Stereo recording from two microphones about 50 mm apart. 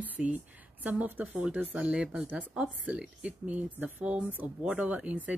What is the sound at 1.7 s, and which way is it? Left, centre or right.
Speech, right.